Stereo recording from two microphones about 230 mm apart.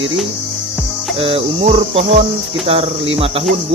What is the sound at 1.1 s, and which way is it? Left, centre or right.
Speech, right.